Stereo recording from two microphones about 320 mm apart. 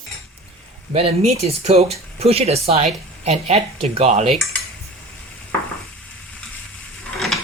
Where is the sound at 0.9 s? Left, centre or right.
Centre.